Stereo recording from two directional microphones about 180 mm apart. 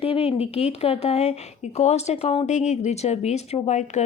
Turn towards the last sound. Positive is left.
turn(degrees=40)  # may be behind; listen again after turning